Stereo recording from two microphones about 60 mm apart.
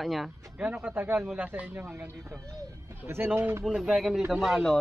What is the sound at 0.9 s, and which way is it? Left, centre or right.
Speech, right.